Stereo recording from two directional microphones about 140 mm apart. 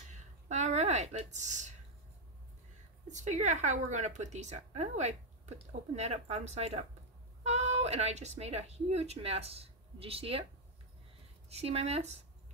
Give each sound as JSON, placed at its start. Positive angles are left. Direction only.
{"t": 0.5, "sound": "a sound", "side_deg": -55}
{"t": 3.1, "sound": "speech", "side_deg": -60}
{"t": 11.4, "sound": "speech", "side_deg": -50}